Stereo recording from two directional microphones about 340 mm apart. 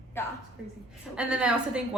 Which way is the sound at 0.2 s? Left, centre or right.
Centre.